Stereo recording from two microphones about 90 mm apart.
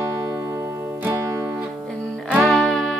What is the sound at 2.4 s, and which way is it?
Music, 5° left (ahead or behind).